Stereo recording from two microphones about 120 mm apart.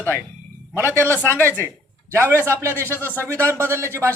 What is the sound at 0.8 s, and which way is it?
Speech, 20° left (ahead or behind).